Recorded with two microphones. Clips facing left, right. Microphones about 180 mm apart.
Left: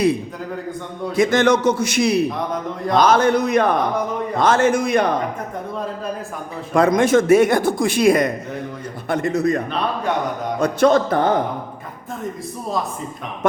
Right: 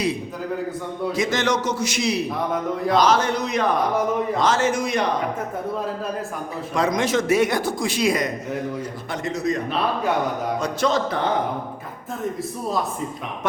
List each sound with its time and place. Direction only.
1.1 s a man's voice: 55° left (ahead or behind)
6.7 s a man's voice: 55° left (ahead or behind)
9.6 s a man's voice: 5° right (ahead or behind)
10.6 s speech: 55° left (ahead or behind)